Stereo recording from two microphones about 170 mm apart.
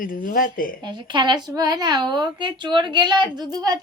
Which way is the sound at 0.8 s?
25° right (ahead or behind).